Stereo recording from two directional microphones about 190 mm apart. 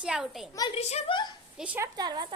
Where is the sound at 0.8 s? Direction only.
35° left (ahead or behind).